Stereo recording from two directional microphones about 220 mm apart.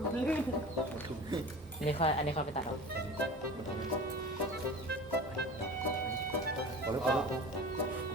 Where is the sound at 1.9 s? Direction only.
25° left (ahead or behind).